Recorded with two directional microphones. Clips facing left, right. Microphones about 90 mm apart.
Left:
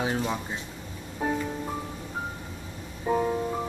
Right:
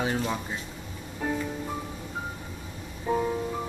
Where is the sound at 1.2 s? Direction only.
20° left (ahead or behind).